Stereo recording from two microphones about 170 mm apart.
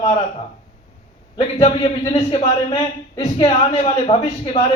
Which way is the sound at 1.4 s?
30° left (ahead or behind).